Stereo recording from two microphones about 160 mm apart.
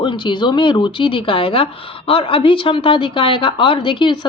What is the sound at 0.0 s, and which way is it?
A woman's voice, 30° left (ahead or behind).